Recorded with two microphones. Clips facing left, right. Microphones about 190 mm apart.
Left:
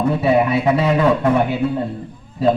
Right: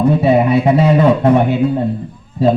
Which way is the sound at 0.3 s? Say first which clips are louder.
Right 2 dB; 25° right (ahead or behind).